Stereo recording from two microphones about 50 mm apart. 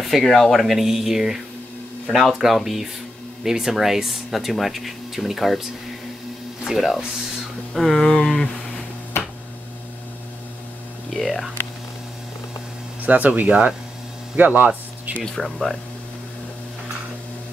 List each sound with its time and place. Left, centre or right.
0.0 s speech: centre
7.2 s a sound: centre
8.0 s a sound: centre
11.1 s speech: centre
13.0 s speech: right
15.2 s speech: centre